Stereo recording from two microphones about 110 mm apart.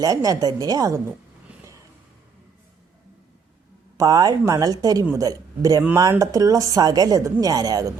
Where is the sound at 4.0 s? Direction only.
35° right (ahead or behind).